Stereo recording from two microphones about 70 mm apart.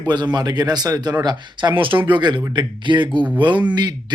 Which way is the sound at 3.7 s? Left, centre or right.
Right.